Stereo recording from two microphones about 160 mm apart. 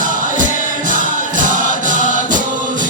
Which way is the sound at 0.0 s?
55° right (ahead or behind).